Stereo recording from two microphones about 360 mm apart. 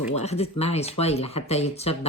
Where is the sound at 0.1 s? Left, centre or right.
Centre.